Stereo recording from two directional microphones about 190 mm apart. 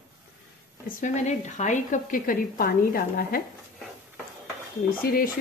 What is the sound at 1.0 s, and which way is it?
A woman's voice, 40° left (ahead or behind).